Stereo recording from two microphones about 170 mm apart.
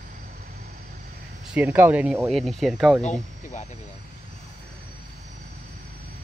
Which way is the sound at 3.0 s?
45° left (ahead or behind).